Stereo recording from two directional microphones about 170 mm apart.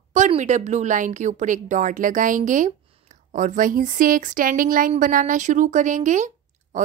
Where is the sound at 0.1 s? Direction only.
45° right (ahead or behind).